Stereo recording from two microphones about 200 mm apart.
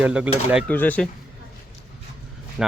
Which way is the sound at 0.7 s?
10° left (ahead or behind).